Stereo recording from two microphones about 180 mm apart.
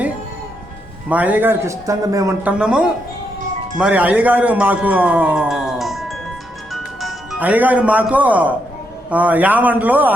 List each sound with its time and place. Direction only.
1.1 s a man's voice: 10° right (ahead or behind)
2.5 s a man's voice: 5° right (ahead or behind)